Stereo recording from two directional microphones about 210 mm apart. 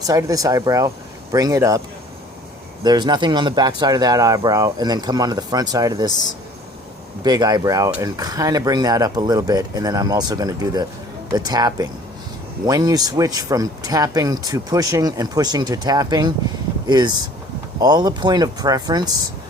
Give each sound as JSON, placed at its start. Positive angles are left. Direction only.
{"t": 0.1, "sound": "speech", "side_deg": -15}
{"t": 2.8, "sound": "speech", "side_deg": -20}
{"t": 7.3, "sound": "speech", "side_deg": -20}